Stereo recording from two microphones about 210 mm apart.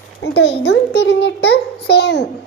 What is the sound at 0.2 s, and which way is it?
Child singing, 50° left (ahead or behind).